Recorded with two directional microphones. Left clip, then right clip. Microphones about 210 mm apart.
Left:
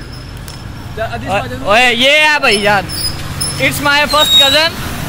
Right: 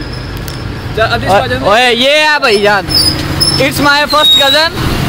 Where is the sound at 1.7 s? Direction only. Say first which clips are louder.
Even; 10° right (ahead or behind).